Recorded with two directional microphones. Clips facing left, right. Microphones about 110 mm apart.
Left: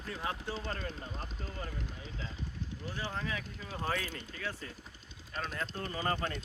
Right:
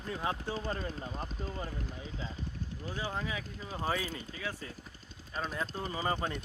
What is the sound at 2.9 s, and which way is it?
Speech, 15° right (ahead or behind).